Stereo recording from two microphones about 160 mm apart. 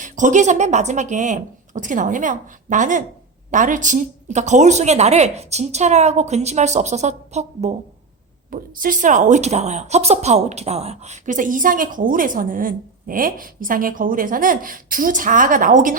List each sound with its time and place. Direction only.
0.0 s a woman's voice: 50° right (ahead or behind)
8.4 s speech: 60° right (ahead or behind)